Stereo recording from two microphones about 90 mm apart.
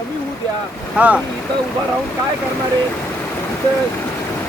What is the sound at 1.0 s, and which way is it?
Speech, 15° right (ahead or behind).